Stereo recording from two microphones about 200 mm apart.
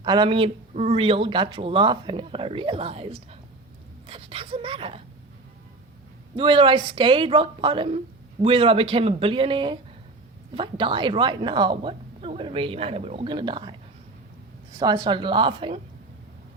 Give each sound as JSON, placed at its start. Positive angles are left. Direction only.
{"t": 0.0, "sound": "a woman's voice", "side_deg": -20}
{"t": 6.3, "sound": "a woman's voice", "side_deg": -25}
{"t": 14.8, "sound": "a woman's voice", "side_deg": -20}